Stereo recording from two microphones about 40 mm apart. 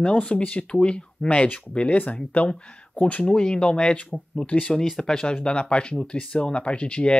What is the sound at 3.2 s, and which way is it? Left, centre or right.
Speech, left.